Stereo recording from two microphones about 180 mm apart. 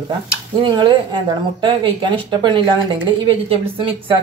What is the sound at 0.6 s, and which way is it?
Speech, 25° right (ahead or behind).